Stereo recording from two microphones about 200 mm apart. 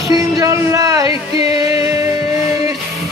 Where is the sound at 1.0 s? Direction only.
30° left (ahead or behind).